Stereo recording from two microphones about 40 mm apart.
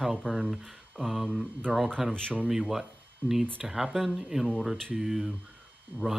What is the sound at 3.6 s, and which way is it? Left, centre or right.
Speech, centre.